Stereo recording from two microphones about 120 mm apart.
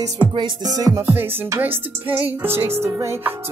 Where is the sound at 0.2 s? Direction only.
40° right (ahead or behind).